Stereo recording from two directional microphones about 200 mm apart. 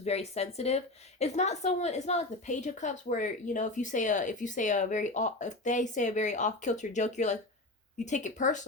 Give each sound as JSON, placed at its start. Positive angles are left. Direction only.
{"t": 0.0, "sound": "a woman's voice", "side_deg": 30}